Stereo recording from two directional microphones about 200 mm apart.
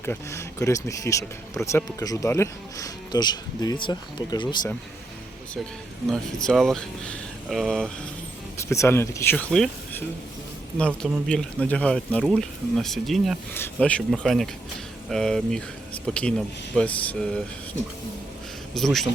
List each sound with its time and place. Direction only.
0.0 s speech: 15° left (ahead or behind)
6.1 s speech: centre (ahead or behind)
8.7 s speech: 15° left (ahead or behind)
18.7 s speech: centre (ahead or behind)